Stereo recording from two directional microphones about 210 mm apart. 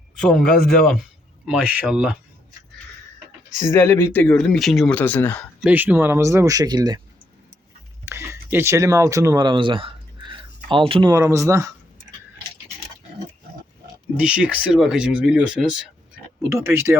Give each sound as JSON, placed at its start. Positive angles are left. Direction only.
{"t": 0.2, "sound": "speech", "side_deg": 5}
{"t": 3.6, "sound": "speech", "side_deg": 10}
{"t": 5.6, "sound": "speech", "side_deg": -10}
{"t": 8.0, "sound": "a sound", "side_deg": -10}
{"t": 11.1, "sound": "speech", "side_deg": -15}
{"t": 14.2, "sound": "speech", "side_deg": -5}